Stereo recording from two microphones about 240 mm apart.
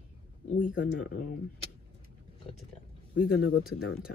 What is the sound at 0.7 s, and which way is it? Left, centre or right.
Speech, left.